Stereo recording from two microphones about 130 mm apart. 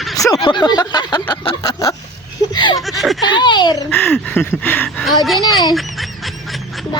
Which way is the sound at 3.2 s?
35° left (ahead or behind).